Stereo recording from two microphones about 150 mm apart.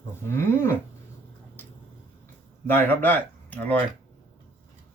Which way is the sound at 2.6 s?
15° left (ahead or behind).